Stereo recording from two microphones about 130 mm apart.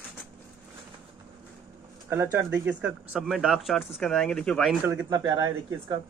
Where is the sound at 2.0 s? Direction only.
15° right (ahead or behind); by 4.7 s 5° left (ahead or behind).